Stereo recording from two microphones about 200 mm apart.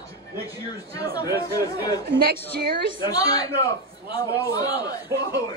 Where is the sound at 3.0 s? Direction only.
20° left (ahead or behind).